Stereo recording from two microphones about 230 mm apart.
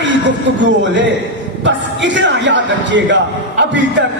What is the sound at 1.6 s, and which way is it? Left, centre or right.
A man's voice, right.